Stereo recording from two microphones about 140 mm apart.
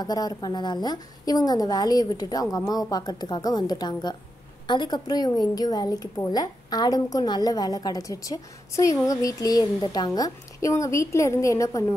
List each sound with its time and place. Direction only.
0.0 s a woman's voice: 30° left (ahead or behind)